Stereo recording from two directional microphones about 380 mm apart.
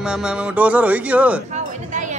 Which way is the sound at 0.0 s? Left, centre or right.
Centre.